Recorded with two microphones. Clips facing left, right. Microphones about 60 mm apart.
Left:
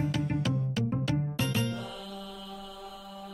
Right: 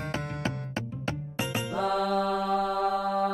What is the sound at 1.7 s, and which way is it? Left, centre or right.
Music, right.